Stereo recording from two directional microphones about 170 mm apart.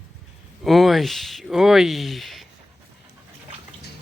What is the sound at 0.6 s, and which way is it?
Speech, centre (ahead or behind).